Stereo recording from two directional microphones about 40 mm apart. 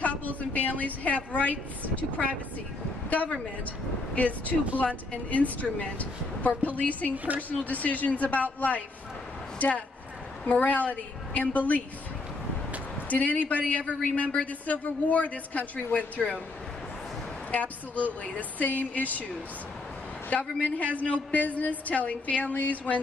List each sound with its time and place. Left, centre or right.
0.0 s a sound: left
2.0 s a woman's voice: left
7.1 s a woman's voice: right
7.4 s a woman's voice: left
13.1 s a woman's voice: left
17.5 s a woman's voice: left
20.6 s a woman's voice: left